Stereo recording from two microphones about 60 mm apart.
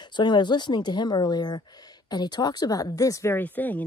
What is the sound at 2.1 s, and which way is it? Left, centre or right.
Speech, left.